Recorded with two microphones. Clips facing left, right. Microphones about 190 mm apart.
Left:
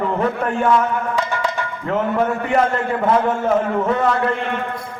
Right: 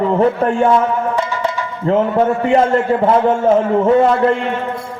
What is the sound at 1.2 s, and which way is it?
Music, 55° left (ahead or behind).